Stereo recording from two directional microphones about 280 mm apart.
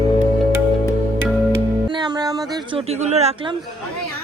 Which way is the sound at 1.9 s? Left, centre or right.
Centre.